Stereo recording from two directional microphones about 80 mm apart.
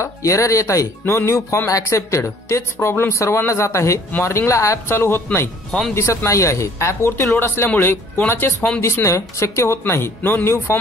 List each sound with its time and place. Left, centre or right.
0.0 s a woman's voice: left
5.7 s speech: centre
5.9 s a woman's voice: left
8.5 s speech: centre
8.8 s a woman's voice: left